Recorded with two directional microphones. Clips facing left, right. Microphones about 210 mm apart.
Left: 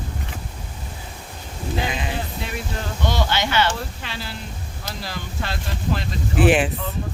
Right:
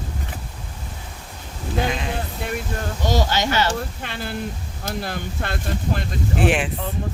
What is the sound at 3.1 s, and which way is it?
Speech, 40° right (ahead or behind).